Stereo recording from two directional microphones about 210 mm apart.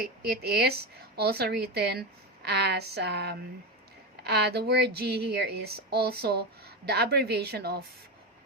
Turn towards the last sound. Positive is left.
turn(degrees=-50)  # may be behind; listen again after turning